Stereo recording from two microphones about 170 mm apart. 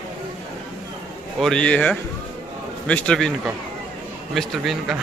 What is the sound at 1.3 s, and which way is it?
Speech, 5° left (ahead or behind).